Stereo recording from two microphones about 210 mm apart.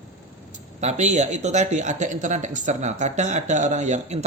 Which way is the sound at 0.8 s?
35° right (ahead or behind).